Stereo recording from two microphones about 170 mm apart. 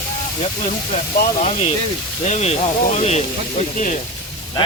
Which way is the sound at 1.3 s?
40° left (ahead or behind).